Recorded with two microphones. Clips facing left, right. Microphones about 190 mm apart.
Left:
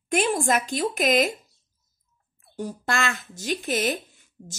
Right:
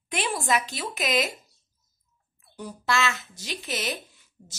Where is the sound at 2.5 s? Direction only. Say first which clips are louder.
Even; 45° left (ahead or behind).